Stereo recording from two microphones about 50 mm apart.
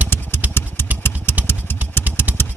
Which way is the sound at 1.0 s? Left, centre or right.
Left.